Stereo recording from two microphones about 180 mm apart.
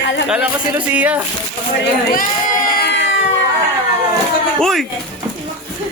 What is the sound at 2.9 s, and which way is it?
Cat, 90° left.